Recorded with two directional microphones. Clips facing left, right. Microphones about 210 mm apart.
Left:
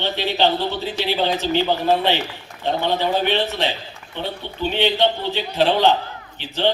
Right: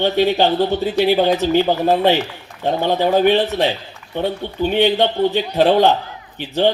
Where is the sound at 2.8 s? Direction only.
45° right (ahead or behind).